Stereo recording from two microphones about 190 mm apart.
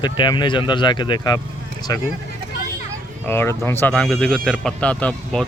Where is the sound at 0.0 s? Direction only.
25° left (ahead or behind).